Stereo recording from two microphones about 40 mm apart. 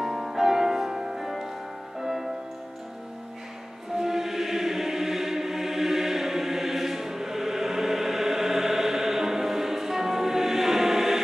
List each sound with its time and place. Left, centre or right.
0.0 s music: centre
3.9 s music: centre